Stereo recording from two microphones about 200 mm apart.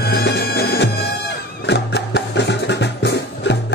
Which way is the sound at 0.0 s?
55° left (ahead or behind).